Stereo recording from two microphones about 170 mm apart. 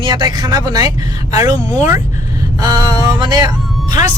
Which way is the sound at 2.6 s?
20° right (ahead or behind).